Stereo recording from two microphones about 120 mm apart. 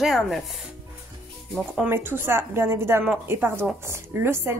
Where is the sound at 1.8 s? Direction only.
20° right (ahead or behind).